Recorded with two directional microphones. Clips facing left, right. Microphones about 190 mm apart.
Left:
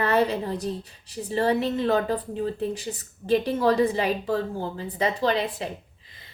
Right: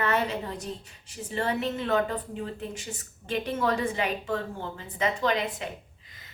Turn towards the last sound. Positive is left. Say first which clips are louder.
# left 3 dB
turn(degrees=35)  # may be behind; listen again after turning